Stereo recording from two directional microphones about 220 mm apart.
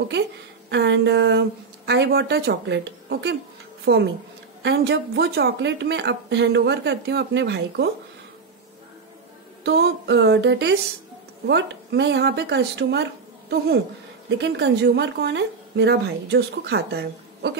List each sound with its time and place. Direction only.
0.7 s a woman's voice: 55° right (ahead or behind)
9.6 s a woman's voice: 50° right (ahead or behind)
14.4 s a woman's voice: 50° right (ahead or behind)